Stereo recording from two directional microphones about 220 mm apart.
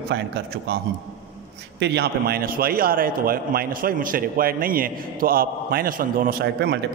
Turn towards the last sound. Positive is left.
turn(degrees=-45)  # may be behind; listen again after turning